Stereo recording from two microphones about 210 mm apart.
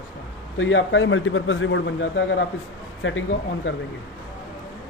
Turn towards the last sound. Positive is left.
turn(degrees=65)  # may be behind; listen again after turning